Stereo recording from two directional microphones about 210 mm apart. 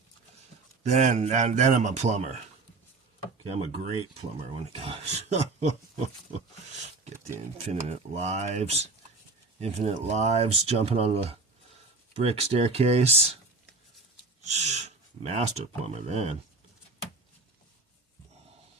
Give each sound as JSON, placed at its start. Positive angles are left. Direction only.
{"t": 0.9, "sound": "speech", "side_deg": -35}
{"t": 3.4, "sound": "speech", "side_deg": -30}
{"t": 4.8, "sound": "speech", "side_deg": -30}
{"t": 7.6, "sound": "speech", "side_deg": -30}
{"t": 14.4, "sound": "speech", "side_deg": -35}